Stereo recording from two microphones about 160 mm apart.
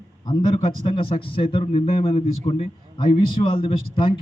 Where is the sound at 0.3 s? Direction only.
30° left (ahead or behind).